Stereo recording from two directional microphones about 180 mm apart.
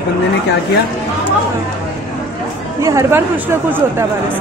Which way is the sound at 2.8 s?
15° right (ahead or behind).